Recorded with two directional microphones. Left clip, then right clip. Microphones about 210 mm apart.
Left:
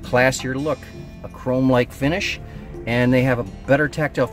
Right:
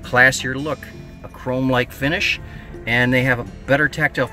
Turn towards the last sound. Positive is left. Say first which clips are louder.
# right 2 dB
turn(degrees=15)  # may be behind; listen again after turning